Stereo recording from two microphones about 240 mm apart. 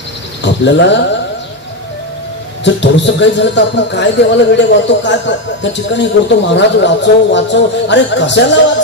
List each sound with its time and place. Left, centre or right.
0.4 s cricket: left
2.6 s speech: left